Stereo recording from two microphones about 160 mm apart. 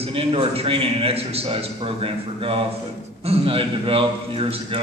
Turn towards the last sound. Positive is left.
turn(degrees=-35)  # may be behind; listen again after turning